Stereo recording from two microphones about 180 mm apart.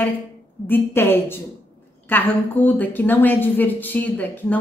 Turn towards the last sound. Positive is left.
turn(degrees=10)  # may be behind; listen again after turning